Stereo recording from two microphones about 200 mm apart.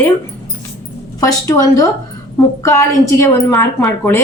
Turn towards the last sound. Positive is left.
turn(degrees=5)  # may be behind; listen again after turning